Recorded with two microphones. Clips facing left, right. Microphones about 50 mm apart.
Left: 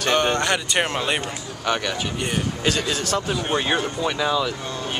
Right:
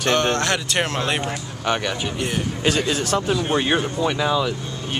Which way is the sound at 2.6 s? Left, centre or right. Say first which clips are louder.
Right 4 dB; centre.